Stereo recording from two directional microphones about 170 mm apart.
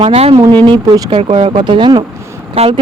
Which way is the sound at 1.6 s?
25° right (ahead or behind).